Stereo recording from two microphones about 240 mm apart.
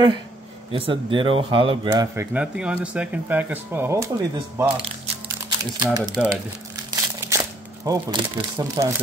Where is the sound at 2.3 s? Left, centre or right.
Centre.